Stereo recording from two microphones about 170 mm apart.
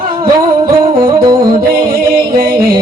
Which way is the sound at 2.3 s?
60° right (ahead or behind).